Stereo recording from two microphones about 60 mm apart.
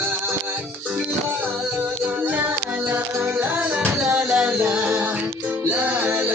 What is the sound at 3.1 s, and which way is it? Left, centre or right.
Music, right.